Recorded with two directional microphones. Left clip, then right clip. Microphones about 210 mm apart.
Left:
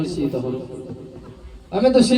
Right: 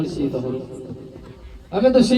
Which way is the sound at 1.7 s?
35° left (ahead or behind).